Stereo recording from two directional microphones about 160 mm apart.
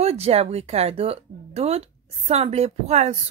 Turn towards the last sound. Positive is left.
turn(degrees=-45)  # may be behind; listen again after turning